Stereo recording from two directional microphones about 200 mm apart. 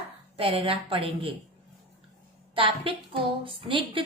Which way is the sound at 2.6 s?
25° right (ahead or behind).